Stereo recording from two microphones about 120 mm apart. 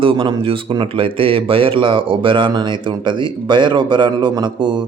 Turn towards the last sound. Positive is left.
turn(degrees=-40)  # may be behind; listen again after turning